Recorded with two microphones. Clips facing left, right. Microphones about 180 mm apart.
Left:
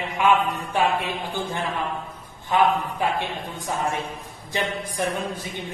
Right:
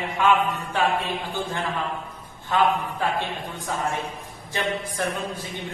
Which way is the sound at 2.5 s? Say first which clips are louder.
Left 1 dB; 15° left (ahead or behind).